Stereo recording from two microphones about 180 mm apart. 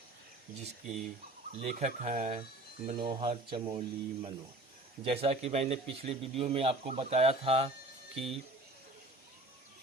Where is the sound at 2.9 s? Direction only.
25° right (ahead or behind).